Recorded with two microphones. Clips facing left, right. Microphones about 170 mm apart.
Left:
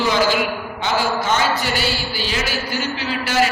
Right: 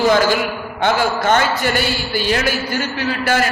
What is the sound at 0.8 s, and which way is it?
A man's voice, 55° right (ahead or behind).